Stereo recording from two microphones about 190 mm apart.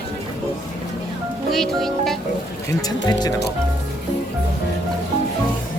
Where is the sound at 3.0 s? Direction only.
20° left (ahead or behind).